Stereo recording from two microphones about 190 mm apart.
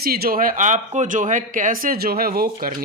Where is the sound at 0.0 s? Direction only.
55° right (ahead or behind).